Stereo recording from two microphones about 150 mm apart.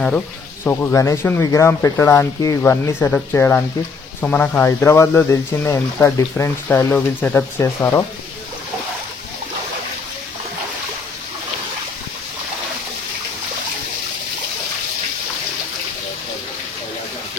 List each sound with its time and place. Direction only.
0.7 s speech: 20° left (ahead or behind)